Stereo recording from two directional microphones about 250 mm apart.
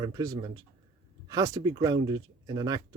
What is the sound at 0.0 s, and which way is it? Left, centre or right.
Speech, centre.